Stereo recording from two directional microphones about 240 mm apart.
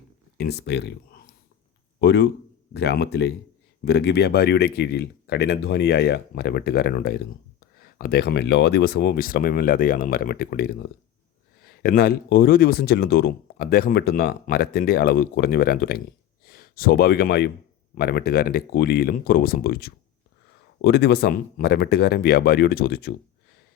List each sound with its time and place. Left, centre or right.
0.3 s speech: left